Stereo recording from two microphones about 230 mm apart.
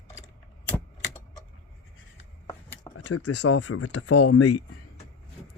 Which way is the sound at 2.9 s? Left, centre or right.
Left.